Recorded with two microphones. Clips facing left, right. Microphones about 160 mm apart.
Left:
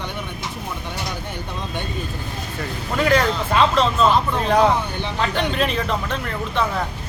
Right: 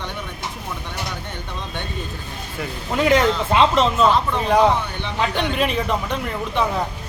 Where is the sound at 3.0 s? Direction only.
20° right (ahead or behind).